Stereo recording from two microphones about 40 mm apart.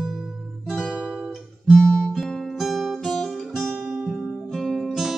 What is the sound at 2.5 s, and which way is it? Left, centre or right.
Guitar, centre.